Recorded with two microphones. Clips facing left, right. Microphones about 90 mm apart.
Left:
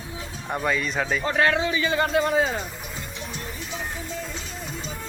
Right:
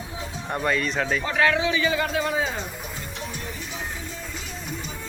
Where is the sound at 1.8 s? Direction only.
35° left (ahead or behind).